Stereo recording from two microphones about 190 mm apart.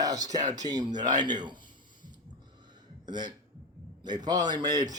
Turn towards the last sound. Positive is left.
turn(degrees=-20)  # may be behind; listen again after turning